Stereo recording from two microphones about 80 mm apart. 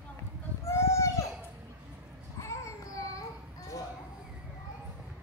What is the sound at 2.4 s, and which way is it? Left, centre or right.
Child singing, left.